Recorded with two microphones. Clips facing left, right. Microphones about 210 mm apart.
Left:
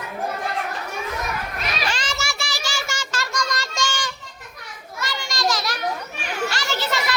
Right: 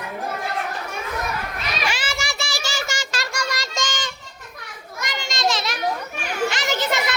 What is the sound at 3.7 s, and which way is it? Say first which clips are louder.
Child singing: left 2 dB; 20° right (ahead or behind).